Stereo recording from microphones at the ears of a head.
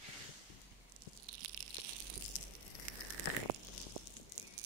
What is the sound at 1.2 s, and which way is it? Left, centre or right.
Tearing, right.